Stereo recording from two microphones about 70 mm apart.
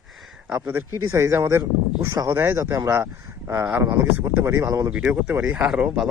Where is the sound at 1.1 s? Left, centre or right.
Right.